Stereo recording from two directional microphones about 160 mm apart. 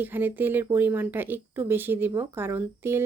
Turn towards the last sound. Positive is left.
turn(degrees=-15)  # may be behind; listen again after turning